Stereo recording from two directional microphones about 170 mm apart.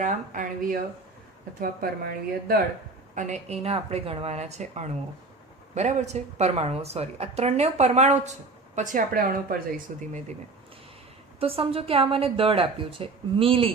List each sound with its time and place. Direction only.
0.0 s speech: 50° right (ahead or behind)
1.6 s a woman's voice: 60° right (ahead or behind)
3.2 s a woman's voice: 45° right (ahead or behind)
11.3 s a woman's voice: 35° right (ahead or behind)